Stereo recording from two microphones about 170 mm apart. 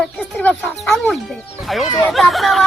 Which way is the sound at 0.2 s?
Centre (ahead or behind).